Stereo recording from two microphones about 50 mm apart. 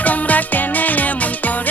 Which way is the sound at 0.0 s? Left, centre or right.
Left.